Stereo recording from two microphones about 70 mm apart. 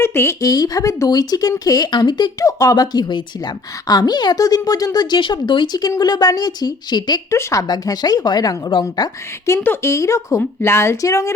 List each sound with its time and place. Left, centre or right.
0.0 s a woman's voice: left
0.4 s speech: left
1.1 s a woman's voice: left
2.4 s a woman's voice: left
7.3 s speech: left
7.7 s a woman's voice: left
9.0 s a woman's voice: left
9.6 s speech: left
11.0 s speech: left